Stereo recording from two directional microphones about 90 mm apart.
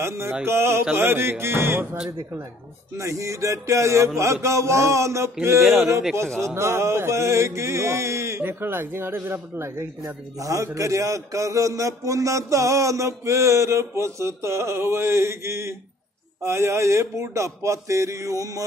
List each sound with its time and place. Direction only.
0.5 s speech: 30° right (ahead or behind)
2.0 s music: 40° right (ahead or behind)
5.6 s speech: centre (ahead or behind)
6.3 s music: 30° right (ahead or behind)